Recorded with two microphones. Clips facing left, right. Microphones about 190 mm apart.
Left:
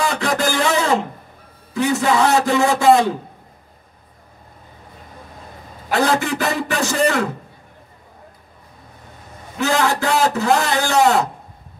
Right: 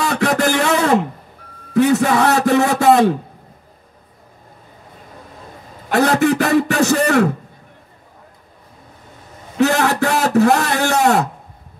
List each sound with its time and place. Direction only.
0.0 s a sound: 60° right (ahead or behind)
1.7 s speech: 65° right (ahead or behind)
5.9 s speech: 65° right (ahead or behind)
9.6 s speech: 65° right (ahead or behind)